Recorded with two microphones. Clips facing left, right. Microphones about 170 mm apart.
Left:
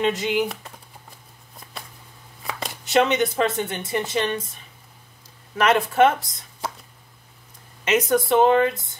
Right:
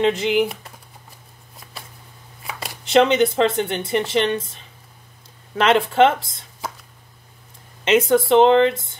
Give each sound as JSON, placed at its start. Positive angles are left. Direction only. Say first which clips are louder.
{"t": 0.0, "sound": "speech", "louder": "right 4 dB", "side_deg": -25}
{"t": 2.9, "sound": "speech", "louder": "right 4 dB", "side_deg": -25}
{"t": 5.6, "sound": "speech", "louder": "right 2 dB", "side_deg": -25}
{"t": 7.8, "sound": "speech", "louder": "right 4 dB", "side_deg": -25}